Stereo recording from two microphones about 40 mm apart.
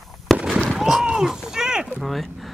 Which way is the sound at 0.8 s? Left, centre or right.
Centre.